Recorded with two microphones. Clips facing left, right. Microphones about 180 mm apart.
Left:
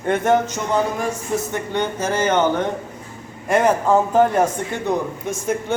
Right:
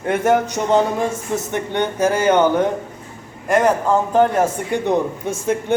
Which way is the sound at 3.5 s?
Centre (ahead or behind).